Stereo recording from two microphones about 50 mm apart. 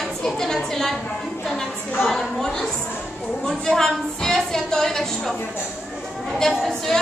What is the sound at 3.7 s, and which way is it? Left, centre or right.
A woman's voice, centre.